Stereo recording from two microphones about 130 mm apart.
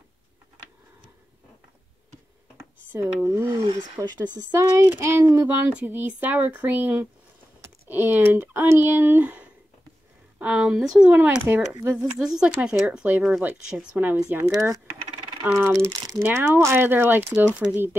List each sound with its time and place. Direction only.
2.5 s a sound: 15° right (ahead or behind)
3.4 s speech: 35° right (ahead or behind)
4.5 s speech: 20° right (ahead or behind)
5.6 s speech: 10° right (ahead or behind)
11.1 s speech: 15° right (ahead or behind)
11.9 s speech: 5° right (ahead or behind)
14.5 s speech: 25° right (ahead or behind)
15.8 s speech: 30° right (ahead or behind)
16.2 s speech: 20° right (ahead or behind)